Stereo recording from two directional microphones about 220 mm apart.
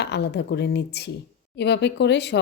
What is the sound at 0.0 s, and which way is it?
Speech, 50° left (ahead or behind).